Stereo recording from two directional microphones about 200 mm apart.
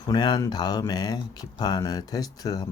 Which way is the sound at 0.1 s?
20° left (ahead or behind).